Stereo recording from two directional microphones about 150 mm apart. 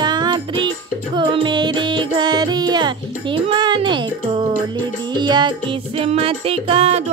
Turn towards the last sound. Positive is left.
turn(degrees=-40)  # may be behind; listen again after turning